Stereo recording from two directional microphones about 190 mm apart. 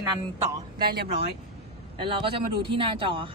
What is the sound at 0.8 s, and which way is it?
Speech, 55° right (ahead or behind).